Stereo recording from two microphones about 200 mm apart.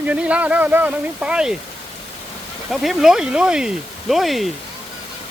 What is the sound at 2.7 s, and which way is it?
Speech, centre (ahead or behind).